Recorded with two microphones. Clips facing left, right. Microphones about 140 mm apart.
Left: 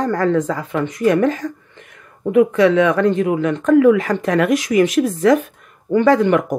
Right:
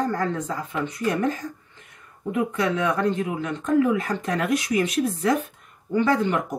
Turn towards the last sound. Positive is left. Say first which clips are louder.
# left 9 dB
turn(degrees=80)